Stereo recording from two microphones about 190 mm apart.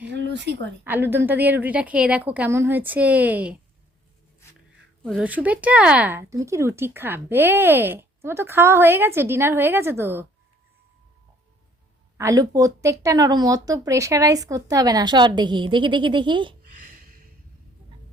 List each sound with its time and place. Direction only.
0.1 s a sound: 65° right (ahead or behind)
0.9 s speech: 10° right (ahead or behind)
5.0 s speech: 5° right (ahead or behind)
12.1 s speech: 15° right (ahead or behind)